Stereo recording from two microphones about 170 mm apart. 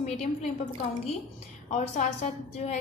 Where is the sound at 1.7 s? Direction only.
40° left (ahead or behind).